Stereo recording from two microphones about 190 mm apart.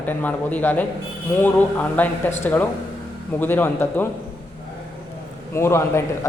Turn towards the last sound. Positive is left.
turn(degrees=15)  # may be behind; listen again after turning